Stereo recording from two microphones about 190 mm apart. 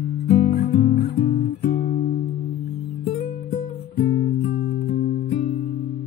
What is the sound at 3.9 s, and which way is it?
Music, 50° left (ahead or behind).